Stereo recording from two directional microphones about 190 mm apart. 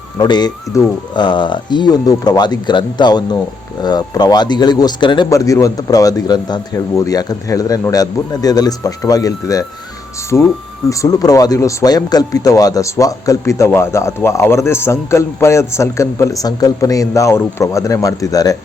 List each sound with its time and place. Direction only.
0.2 s speech: 20° left (ahead or behind)